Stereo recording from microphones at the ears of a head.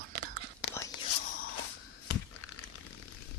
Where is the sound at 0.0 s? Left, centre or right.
Right.